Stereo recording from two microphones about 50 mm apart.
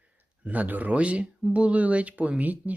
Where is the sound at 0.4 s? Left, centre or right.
Right.